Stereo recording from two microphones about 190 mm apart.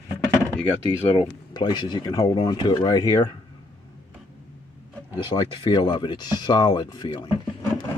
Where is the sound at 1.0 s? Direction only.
25° left (ahead or behind).